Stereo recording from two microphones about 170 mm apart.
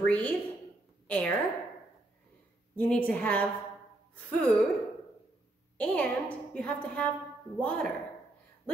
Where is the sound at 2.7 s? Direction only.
5° left (ahead or behind).